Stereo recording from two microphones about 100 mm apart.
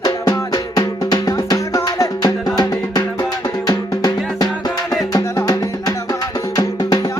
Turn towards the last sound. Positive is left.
turn(degrees=40)  # may be behind; listen again after turning